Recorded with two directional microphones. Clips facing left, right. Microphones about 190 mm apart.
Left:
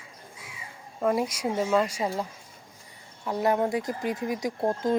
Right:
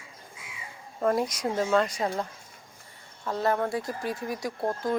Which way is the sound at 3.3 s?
15° left (ahead or behind).